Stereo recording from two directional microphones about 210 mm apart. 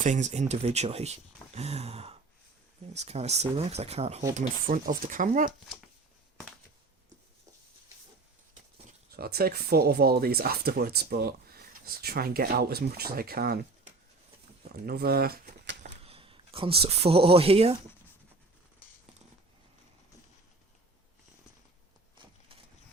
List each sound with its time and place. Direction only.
0.0 s speech: 35° right (ahead or behind)
5.5 s speech: centre (ahead or behind)
9.0 s speech: 45° right (ahead or behind)
15.8 s a sound: 25° right (ahead or behind)